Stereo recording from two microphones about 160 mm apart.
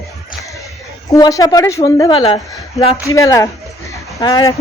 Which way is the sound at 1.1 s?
20° left (ahead or behind).